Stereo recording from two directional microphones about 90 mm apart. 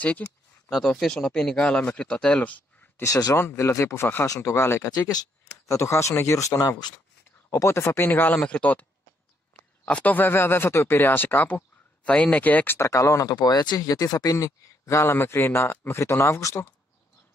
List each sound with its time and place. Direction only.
0.2 s speech: 15° left (ahead or behind)
0.7 s speech: 5° left (ahead or behind)
3.0 s speech: 40° left (ahead or behind)
3.3 s speech: 30° left (ahead or behind)
4.9 s speech: 40° left (ahead or behind); by 8.8 s 15° left (ahead or behind)
9.8 s speech: 15° left (ahead or behind)
12.7 s speech: 35° left (ahead or behind)